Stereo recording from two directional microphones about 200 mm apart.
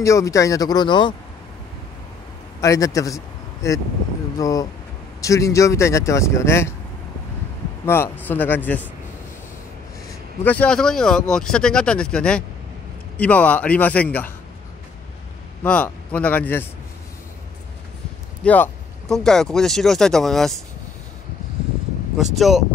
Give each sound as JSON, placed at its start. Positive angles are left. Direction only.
{"t": 0.0, "sound": "speech", "side_deg": 15}
{"t": 2.6, "sound": "speech", "side_deg": 15}
{"t": 4.4, "sound": "speech", "side_deg": 15}
{"t": 7.8, "sound": "speech", "side_deg": 10}
{"t": 10.4, "sound": "speech", "side_deg": 5}
{"t": 15.6, "sound": "speech", "side_deg": 5}
{"t": 18.4, "sound": "speech", "side_deg": 5}
{"t": 22.1, "sound": "speech", "side_deg": 0}